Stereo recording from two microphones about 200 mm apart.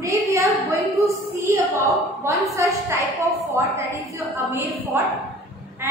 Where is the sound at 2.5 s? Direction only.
15° right (ahead or behind).